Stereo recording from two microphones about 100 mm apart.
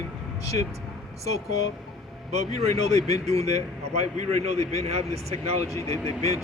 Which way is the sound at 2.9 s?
90° right.